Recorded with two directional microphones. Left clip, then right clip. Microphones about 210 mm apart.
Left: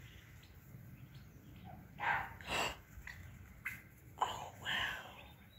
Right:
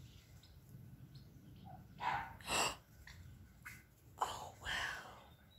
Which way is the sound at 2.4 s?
20° right (ahead or behind).